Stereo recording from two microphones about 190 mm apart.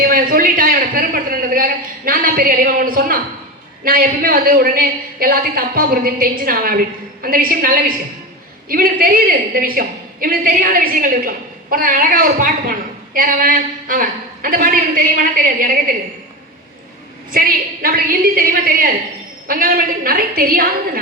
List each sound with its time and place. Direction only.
0.1 s a sound: 45° right (ahead or behind)
3.8 s a woman's voice: 50° right (ahead or behind)
17.3 s a woman's voice: 50° right (ahead or behind)